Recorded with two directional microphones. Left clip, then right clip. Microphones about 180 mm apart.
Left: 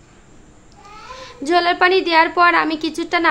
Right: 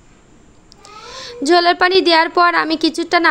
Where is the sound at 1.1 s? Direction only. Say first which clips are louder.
Right 4 dB; 30° right (ahead or behind).